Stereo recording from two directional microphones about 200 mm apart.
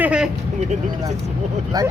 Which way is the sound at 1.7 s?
20° right (ahead or behind).